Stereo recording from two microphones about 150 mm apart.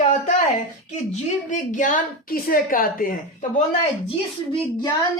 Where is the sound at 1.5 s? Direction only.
55° left (ahead or behind).